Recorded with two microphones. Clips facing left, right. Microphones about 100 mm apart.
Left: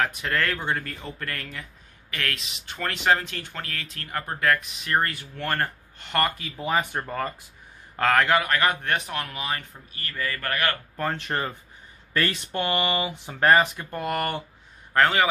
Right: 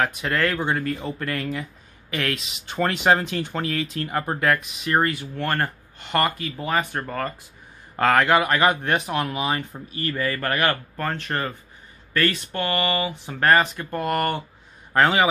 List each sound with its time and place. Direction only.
0.0 s speech: 5° right (ahead or behind)
7.9 s a man's voice: 5° right (ahead or behind)
9.7 s a man's voice: 30° right (ahead or behind)
11.0 s speech: 10° left (ahead or behind)
14.9 s a man's voice: 15° right (ahead or behind)